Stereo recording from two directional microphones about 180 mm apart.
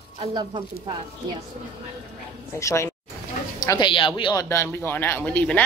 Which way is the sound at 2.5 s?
15° left (ahead or behind).